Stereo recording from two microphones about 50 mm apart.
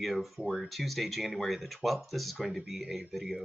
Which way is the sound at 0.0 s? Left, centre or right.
Centre.